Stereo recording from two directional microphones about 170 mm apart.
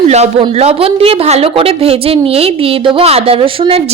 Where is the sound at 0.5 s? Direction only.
35° right (ahead or behind).